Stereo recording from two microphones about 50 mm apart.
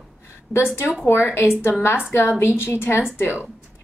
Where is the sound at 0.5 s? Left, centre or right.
Centre.